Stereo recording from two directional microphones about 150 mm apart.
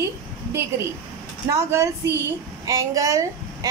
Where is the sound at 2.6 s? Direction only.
20° right (ahead or behind).